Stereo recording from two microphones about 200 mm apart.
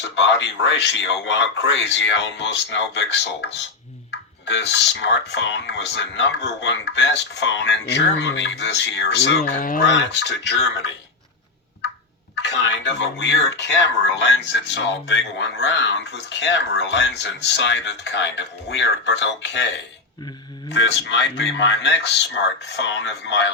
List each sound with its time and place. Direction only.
0.2 s speech: 60° left (ahead or behind)
9.4 s speech: 45° left (ahead or behind)
9.8 s speech: 60° left (ahead or behind)
12.4 s speech: 60° left (ahead or behind)